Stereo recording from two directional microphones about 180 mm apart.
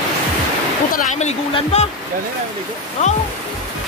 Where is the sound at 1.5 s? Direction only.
35° left (ahead or behind).